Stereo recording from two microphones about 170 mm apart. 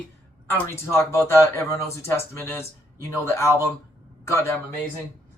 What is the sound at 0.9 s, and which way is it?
Speech, 15° left (ahead or behind).